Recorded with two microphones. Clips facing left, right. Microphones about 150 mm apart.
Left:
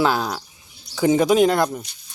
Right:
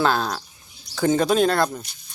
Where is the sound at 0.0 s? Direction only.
10° left (ahead or behind).